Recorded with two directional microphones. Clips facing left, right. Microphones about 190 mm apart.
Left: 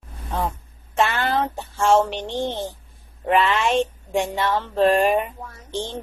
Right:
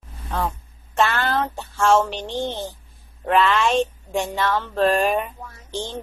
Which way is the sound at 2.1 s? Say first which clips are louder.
Left 1 dB; 20° left (ahead or behind).